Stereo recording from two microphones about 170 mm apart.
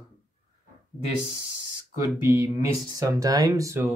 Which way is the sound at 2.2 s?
15° right (ahead or behind).